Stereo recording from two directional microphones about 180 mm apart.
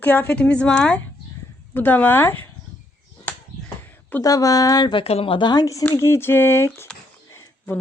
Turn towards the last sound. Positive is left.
turn(degrees=15)  # may be behind; listen again after turning